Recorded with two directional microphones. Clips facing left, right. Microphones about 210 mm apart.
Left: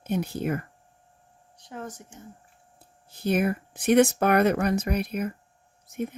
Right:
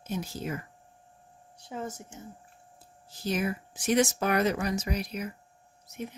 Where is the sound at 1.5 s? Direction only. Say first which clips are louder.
Right 1 dB; 10° right (ahead or behind).